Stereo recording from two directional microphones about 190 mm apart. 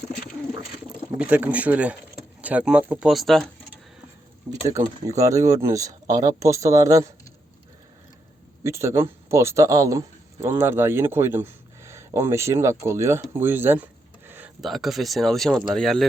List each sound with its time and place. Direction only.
1.2 s speech: 10° right (ahead or behind)
4.6 s speech: 15° right (ahead or behind)
8.6 s speech: 15° right (ahead or behind); by 16.0 s centre (ahead or behind)